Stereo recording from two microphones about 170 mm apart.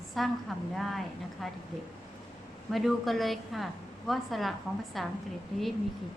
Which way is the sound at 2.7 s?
Centre (ahead or behind).